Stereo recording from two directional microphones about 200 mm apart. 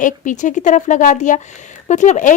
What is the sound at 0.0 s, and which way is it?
A woman's voice, 40° left (ahead or behind).